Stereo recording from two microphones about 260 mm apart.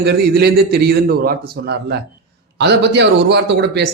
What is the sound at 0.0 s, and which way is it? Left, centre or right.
Speech, right.